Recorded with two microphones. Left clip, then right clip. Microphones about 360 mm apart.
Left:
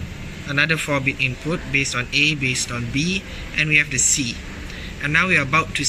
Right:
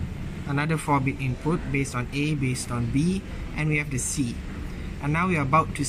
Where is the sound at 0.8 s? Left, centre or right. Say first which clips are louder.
Left 5 dB; centre.